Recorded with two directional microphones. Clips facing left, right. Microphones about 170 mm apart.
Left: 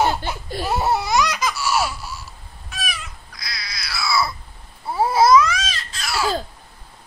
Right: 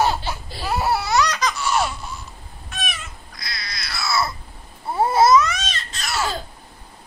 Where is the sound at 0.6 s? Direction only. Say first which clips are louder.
Left 1 dB; 20° left (ahead or behind); by 2.1 s 5° left (ahead or behind).